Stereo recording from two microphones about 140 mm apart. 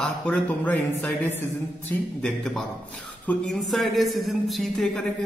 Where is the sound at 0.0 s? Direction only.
10° left (ahead or behind).